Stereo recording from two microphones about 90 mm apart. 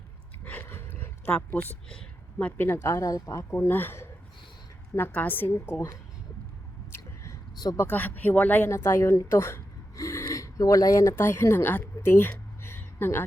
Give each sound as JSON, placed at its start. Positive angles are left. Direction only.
{"t": 0.4, "sound": "dog", "side_deg": 20}
{"t": 1.9, "sound": "a sound", "side_deg": 10}
{"t": 2.6, "sound": "speech", "side_deg": 25}
{"t": 3.5, "sound": "speech", "side_deg": 25}
{"t": 7.8, "sound": "speech", "side_deg": 20}
{"t": 8.7, "sound": "speech", "side_deg": 30}
{"t": 11.1, "sound": "a woman's voice", "side_deg": 25}